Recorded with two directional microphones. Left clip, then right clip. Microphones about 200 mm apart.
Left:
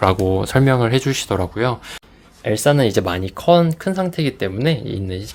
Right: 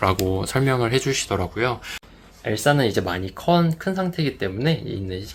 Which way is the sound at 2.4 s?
45° left (ahead or behind).